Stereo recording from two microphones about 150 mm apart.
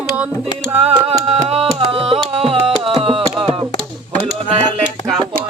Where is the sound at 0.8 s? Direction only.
45° right (ahead or behind).